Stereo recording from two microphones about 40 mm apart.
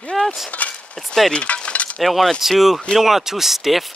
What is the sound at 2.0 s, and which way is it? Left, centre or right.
Speech, centre.